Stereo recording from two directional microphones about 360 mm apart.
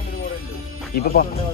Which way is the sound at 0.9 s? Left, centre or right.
Left.